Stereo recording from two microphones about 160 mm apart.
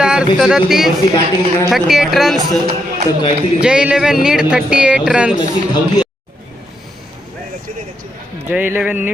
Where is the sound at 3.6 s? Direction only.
5° right (ahead or behind).